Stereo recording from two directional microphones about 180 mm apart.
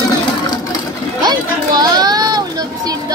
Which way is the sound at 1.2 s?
20° right (ahead or behind).